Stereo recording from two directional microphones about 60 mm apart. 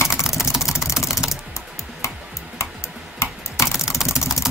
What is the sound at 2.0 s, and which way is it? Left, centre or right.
Tick-tock, left.